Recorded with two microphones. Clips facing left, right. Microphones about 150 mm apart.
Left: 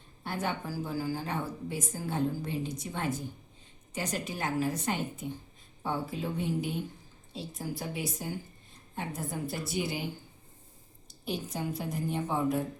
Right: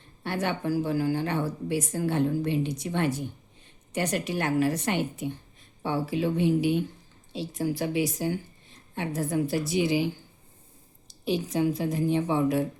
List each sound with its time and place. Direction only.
0.2 s a woman's voice: 80° right
11.1 s a woman's voice: 90° right